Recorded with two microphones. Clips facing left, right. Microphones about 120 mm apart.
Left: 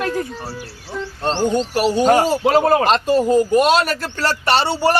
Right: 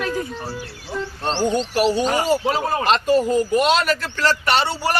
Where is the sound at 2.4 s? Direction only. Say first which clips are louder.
Left 7 dB; 65° left (ahead or behind).